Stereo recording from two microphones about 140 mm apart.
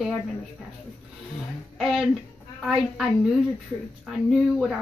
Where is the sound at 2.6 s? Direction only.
5° right (ahead or behind).